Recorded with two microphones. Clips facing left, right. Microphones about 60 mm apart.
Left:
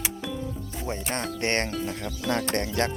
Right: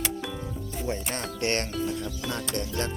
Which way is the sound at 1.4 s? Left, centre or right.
Left.